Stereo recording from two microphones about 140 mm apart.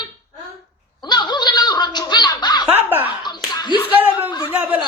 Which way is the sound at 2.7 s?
15° right (ahead or behind).